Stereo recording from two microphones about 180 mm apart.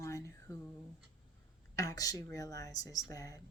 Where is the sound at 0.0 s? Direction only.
15° left (ahead or behind).